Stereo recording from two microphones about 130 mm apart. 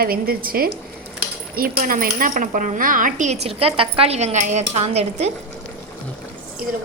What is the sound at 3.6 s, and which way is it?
Speech, 45° right (ahead or behind).